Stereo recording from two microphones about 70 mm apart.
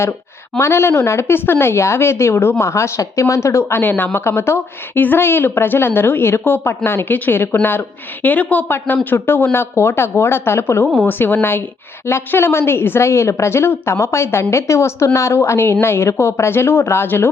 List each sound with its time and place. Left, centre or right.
0.6 s a woman's voice: left